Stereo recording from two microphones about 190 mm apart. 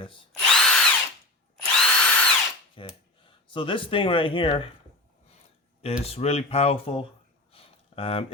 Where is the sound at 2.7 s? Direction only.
25° left (ahead or behind).